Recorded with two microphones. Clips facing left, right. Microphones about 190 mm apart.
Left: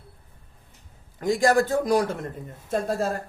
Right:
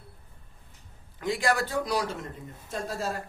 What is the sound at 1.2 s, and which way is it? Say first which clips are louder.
A man's voice: left 7 dB; 45° left (ahead or behind).